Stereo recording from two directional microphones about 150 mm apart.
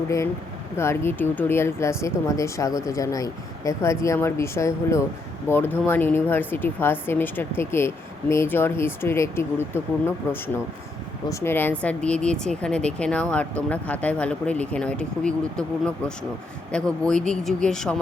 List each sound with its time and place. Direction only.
0.8 s speech: 15° left (ahead or behind)
17.0 s speech: 5° left (ahead or behind)